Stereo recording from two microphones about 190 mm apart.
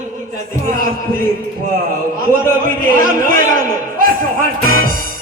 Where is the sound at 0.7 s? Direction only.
45° right (ahead or behind).